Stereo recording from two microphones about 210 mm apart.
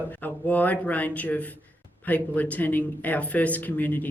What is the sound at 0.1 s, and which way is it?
Speech, 10° left (ahead or behind).